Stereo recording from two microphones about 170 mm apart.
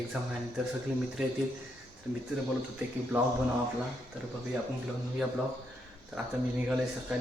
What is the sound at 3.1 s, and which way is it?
Speech, 10° right (ahead or behind).